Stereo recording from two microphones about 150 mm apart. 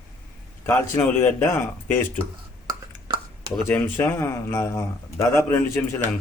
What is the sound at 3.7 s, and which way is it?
A man's voice, 10° left (ahead or behind).